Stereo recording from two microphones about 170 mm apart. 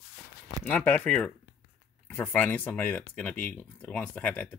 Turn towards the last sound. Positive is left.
turn(degrees=5)  # may be behind; listen again after turning